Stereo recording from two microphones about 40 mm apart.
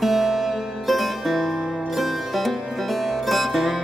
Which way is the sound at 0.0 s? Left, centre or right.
Centre.